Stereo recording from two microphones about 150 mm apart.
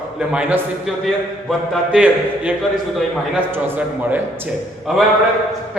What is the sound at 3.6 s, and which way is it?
Speech, 10° right (ahead or behind).